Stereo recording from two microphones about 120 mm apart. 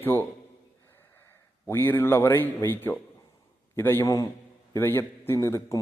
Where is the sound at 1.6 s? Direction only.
20° left (ahead or behind).